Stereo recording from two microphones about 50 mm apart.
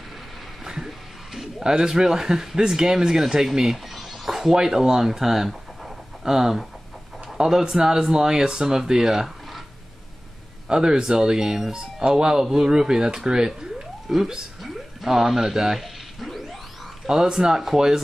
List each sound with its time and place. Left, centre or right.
0.7 s music: centre
1.6 s speech: centre
10.7 s speech: centre
13.6 s a sound: centre
17.0 s speech: centre